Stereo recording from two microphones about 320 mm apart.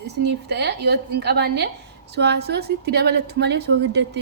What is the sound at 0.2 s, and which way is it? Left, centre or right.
A woman's voice, right.